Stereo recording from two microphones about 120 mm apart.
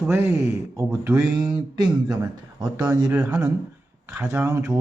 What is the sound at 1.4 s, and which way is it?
Speech, 35° right (ahead or behind).